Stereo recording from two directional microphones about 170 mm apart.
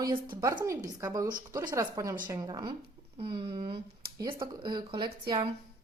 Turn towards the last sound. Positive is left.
turn(degrees=-30)  # may be behind; listen again after turning